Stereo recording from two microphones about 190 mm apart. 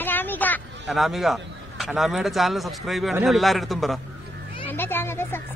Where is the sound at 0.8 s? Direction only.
Centre (ahead or behind).